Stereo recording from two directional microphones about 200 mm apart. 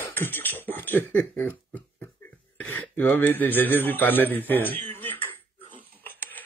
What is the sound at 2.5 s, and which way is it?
Speech, 5° left (ahead or behind).